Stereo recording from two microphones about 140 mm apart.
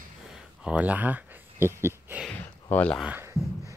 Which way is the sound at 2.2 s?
10° left (ahead or behind).